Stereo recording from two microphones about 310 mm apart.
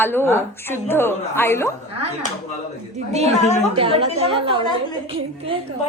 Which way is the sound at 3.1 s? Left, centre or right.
Right.